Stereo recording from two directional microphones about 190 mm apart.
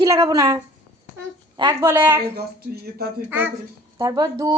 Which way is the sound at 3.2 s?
10° right (ahead or behind).